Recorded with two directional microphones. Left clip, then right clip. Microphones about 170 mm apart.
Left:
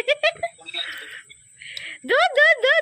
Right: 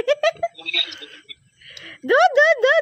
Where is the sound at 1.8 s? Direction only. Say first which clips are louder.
Right 3 dB; 45° right (ahead or behind).